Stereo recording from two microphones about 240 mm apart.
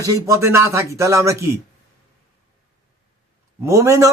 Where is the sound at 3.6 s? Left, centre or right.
Centre.